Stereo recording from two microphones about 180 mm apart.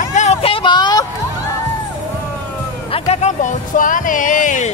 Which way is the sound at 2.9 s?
35° left (ahead or behind).